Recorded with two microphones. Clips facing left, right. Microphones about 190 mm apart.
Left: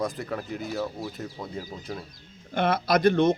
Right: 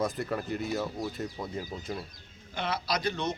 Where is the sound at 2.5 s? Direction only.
50° left (ahead or behind).